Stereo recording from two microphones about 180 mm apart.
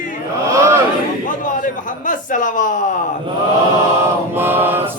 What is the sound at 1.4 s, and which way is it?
Speech, 45° left (ahead or behind).